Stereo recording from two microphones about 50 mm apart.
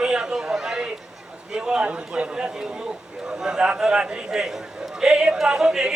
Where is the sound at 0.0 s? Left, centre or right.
Centre.